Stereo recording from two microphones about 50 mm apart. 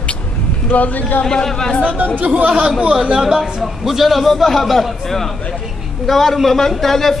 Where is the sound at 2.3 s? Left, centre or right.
Right.